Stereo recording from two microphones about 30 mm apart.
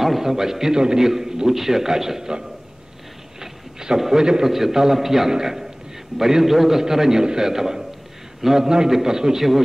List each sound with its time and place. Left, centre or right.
0.0 s a man's voice: centre
3.3 s a sound: centre
4.0 s a man's voice: right
4.5 s a man's voice: centre
8.6 s a man's voice: right